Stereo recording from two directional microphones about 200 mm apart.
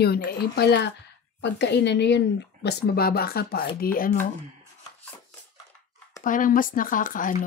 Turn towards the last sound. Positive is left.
turn(degrees=40)  # may be behind; listen again after turning